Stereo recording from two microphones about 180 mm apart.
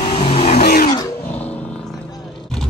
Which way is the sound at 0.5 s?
55° left (ahead or behind).